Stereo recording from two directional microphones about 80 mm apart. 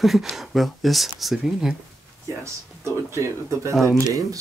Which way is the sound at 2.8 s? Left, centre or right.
Right.